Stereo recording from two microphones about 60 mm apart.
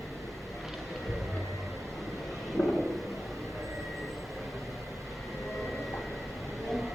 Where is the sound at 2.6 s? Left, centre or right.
Centre.